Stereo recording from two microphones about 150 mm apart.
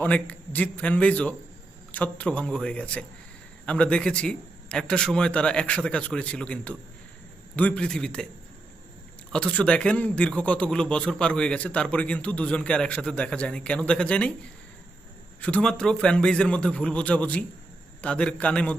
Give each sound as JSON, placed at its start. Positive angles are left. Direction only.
{"t": 0.0, "sound": "a man's voice", "side_deg": 10}
{"t": 9.3, "sound": "a man's voice", "side_deg": 10}
{"t": 15.4, "sound": "a man's voice", "side_deg": 5}